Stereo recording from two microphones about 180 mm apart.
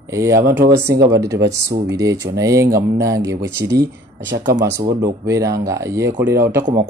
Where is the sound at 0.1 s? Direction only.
15° right (ahead or behind).